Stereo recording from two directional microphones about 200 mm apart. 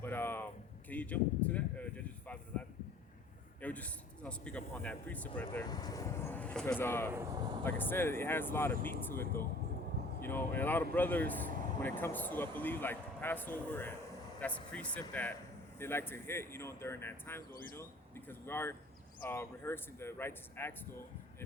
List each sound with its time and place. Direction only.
0.0 s a sound: 10° left (ahead or behind)
0.9 s speech: 10° left (ahead or behind)
5.6 s speech: 20° left (ahead or behind)
7.1 s speech: 20° right (ahead or behind)
7.6 s speech: 10° left (ahead or behind)